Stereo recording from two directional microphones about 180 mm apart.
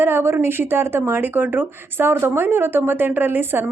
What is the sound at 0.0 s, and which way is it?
Speech, 15° right (ahead or behind).